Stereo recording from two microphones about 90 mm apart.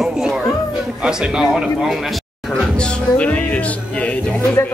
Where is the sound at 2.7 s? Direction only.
10° left (ahead or behind).